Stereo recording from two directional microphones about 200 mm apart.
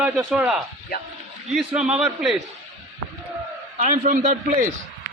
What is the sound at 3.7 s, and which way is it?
Speech, 40° right (ahead or behind).